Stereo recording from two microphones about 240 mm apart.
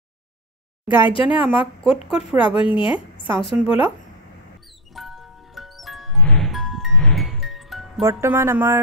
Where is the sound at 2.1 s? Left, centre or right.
Centre.